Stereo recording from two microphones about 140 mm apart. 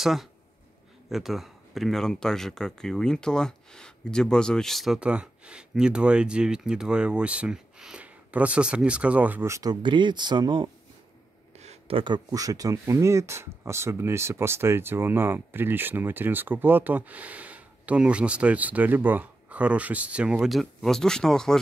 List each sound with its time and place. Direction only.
0.0 s speech: centre (ahead or behind); by 10.7 s 35° right (ahead or behind)
11.5 s a sound: 50° right (ahead or behind)
12.0 s speech: 30° right (ahead or behind); by 21.5 s 5° left (ahead or behind)